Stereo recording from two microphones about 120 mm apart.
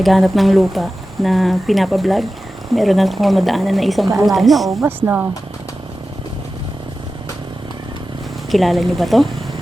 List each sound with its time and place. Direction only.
0.0 s speech: centre (ahead or behind)
4.8 s speech: 15° right (ahead or behind)
8.4 s speech: centre (ahead or behind)